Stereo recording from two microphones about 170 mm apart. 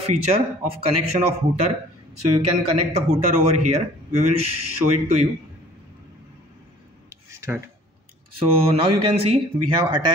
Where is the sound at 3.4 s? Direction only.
40° right (ahead or behind).